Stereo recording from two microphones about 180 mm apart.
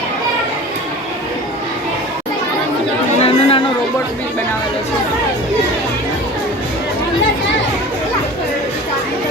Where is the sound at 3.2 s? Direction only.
30° left (ahead or behind).